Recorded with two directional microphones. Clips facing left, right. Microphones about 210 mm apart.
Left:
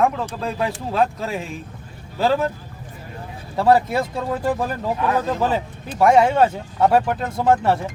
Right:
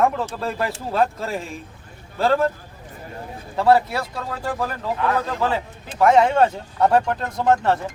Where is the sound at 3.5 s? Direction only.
15° left (ahead or behind).